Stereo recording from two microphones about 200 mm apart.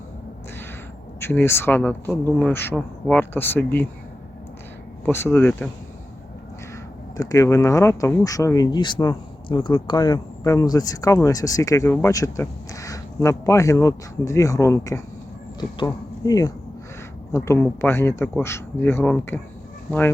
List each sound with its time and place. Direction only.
1.2 s speech: 10° left (ahead or behind)
5.0 s speech: 10° left (ahead or behind)
7.2 s speech: 15° left (ahead or behind)